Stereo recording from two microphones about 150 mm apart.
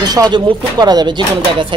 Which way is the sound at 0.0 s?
25° right (ahead or behind).